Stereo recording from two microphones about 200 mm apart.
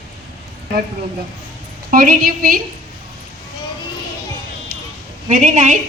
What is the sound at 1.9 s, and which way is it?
Child singing, 45° right (ahead or behind).